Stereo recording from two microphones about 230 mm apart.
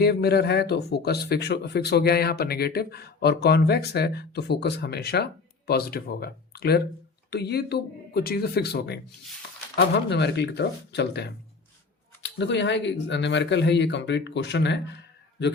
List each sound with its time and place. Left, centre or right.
0.0 s speech: left